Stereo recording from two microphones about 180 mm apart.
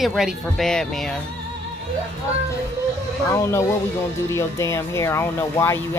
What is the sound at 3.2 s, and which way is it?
Speech, 15° left (ahead or behind).